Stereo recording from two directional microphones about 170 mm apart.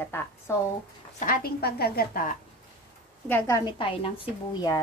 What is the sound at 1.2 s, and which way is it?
A woman's voice, 60° left (ahead or behind).